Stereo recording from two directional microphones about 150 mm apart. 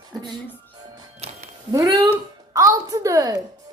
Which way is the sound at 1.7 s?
20° right (ahead or behind).